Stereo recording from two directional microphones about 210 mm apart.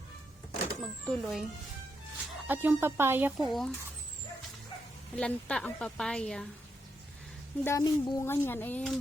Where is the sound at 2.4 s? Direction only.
10° right (ahead or behind).